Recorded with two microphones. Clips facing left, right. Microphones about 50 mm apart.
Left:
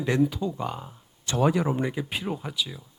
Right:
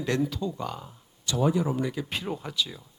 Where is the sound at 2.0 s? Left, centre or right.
Centre.